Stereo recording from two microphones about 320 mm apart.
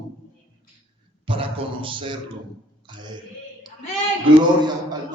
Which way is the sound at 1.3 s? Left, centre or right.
Centre.